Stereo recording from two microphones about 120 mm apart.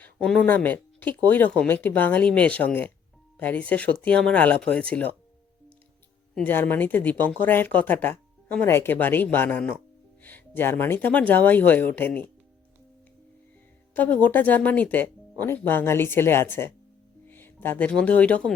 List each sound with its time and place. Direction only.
0.0 s speech: 10° left (ahead or behind)
6.4 s speech: 15° left (ahead or behind)
13.9 s speech: 15° left (ahead or behind)